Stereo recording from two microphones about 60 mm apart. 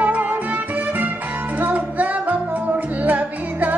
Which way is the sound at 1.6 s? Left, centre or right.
Right.